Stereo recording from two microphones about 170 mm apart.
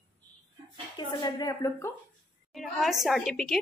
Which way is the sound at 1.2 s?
25° left (ahead or behind).